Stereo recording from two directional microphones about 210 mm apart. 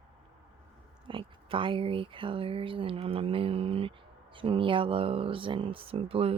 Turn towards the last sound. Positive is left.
turn(degrees=-25)  # may be behind; listen again after turning